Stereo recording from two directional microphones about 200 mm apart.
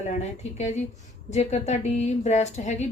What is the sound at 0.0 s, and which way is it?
A woman's voice, 35° left (ahead or behind).